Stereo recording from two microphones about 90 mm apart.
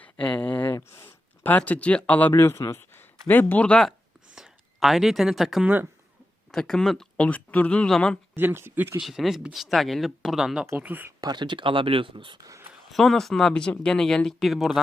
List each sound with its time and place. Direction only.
0.0 s a sound: 15° left (ahead or behind)
1.5 s speech: 15° left (ahead or behind)
2.3 s speech: 30° left (ahead or behind)
4.4 s speech: 5° right (ahead or behind)
5.6 s speech: 20° right (ahead or behind)
6.5 s speech: 5° left (ahead or behind)
8.4 s speech: 25° right (ahead or behind)
9.0 s speech: 5° right (ahead or behind)
10.8 s speech: 20° right (ahead or behind)
11.2 s speech: 55° right (ahead or behind)
12.4 s speech: 40° right (ahead or behind)
12.9 s speech: 5° left (ahead or behind)